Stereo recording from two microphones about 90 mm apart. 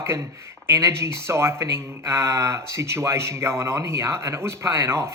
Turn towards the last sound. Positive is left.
turn(degrees=-30)  # may be behind; listen again after turning